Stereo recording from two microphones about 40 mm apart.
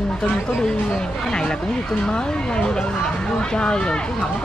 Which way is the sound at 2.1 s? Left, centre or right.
Left.